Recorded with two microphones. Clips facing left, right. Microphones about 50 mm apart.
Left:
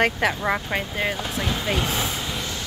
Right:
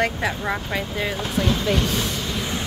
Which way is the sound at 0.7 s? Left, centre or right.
Left.